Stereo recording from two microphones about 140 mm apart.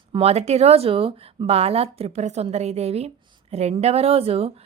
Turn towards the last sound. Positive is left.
turn(degrees=-45)  # may be behind; listen again after turning